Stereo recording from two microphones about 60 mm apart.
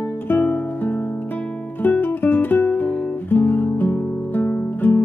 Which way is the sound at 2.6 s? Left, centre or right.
Left.